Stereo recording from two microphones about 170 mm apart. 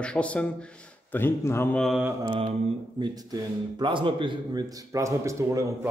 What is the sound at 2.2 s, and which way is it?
Mantra, 25° right (ahead or behind).